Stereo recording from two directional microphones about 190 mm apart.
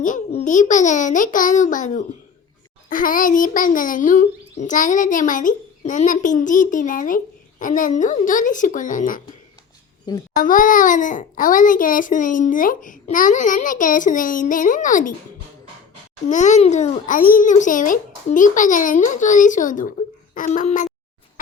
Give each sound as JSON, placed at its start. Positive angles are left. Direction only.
{"t": 0.0, "sound": "a child's voice", "side_deg": 40}
{"t": 10.3, "sound": "a child's voice", "side_deg": 45}
{"t": 16.2, "sound": "a child's voice", "side_deg": 40}